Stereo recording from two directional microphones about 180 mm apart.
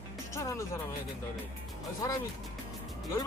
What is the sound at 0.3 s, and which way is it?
Speech, 15° left (ahead or behind).